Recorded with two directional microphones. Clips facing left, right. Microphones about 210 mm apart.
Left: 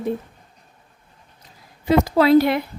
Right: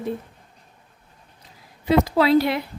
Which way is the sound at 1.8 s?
45° left (ahead or behind).